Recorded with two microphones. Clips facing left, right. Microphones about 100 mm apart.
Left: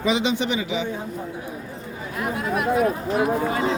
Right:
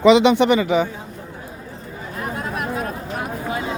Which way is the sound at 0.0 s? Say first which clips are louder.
Right 10 dB; 75° right (ahead or behind).